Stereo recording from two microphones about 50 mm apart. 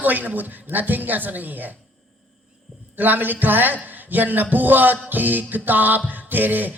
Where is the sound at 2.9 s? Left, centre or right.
Right.